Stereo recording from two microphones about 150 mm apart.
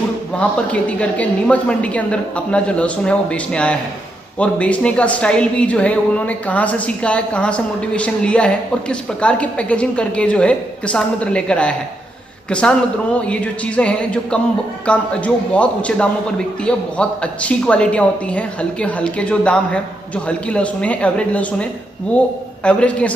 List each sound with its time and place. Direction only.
0.4 s speech: 10° left (ahead or behind)